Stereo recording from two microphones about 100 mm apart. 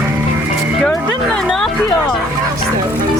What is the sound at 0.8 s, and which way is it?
Speech, 10° left (ahead or behind).